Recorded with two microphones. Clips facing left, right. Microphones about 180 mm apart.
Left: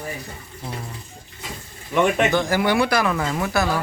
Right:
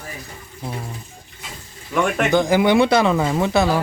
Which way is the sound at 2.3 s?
15° right (ahead or behind).